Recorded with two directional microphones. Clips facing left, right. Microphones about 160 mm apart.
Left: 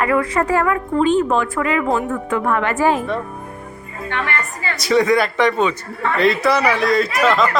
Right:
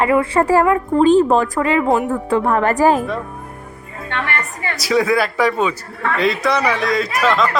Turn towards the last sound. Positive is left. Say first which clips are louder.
# left 1 dB
turn(degrees=0)  # may be behind; listen again after turning